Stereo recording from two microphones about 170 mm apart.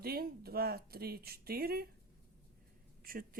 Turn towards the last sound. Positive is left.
turn(degrees=-55)  # may be behind; listen again after turning